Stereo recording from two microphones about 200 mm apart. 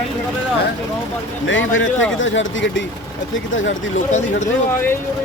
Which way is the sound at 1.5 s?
70° left (ahead or behind).